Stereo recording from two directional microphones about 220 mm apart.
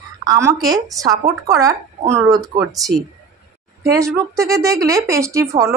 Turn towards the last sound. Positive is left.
turn(degrees=-15)  # may be behind; listen again after turning